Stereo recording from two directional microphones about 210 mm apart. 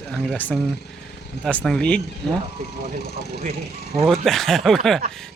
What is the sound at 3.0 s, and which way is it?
Speech, 50° left (ahead or behind).